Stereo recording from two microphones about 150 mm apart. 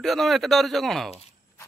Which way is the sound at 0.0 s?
Centre (ahead or behind).